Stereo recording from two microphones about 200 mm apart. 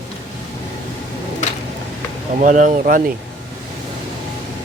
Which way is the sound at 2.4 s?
40° right (ahead or behind).